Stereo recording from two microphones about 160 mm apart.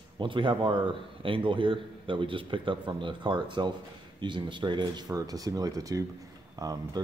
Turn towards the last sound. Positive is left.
turn(degrees=-25)  # may be behind; listen again after turning